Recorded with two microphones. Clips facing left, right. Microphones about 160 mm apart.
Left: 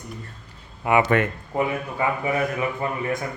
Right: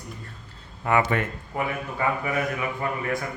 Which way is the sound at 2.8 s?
25° left (ahead or behind).